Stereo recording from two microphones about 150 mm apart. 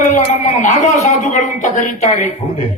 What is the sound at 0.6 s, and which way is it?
A man's voice, 55° left (ahead or behind).